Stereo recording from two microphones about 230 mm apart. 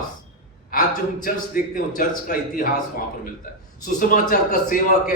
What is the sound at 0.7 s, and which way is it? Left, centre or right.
A man's voice, left.